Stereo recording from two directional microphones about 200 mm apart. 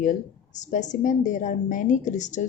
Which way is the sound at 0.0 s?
40° left (ahead or behind).